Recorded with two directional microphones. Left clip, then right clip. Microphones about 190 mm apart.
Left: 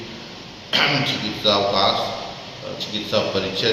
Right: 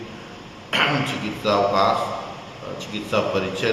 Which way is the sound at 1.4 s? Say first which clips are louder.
Even; 10° right (ahead or behind).